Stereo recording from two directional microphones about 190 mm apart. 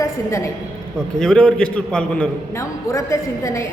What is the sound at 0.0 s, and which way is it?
Speech, 15° left (ahead or behind).